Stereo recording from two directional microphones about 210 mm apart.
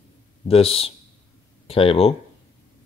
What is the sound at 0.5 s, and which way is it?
Speech, 25° left (ahead or behind).